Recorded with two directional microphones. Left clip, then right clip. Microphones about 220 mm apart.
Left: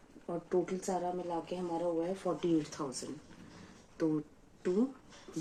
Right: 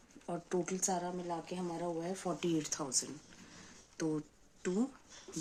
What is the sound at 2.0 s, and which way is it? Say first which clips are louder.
Speech: left 4 dB; 55° right (ahead or behind).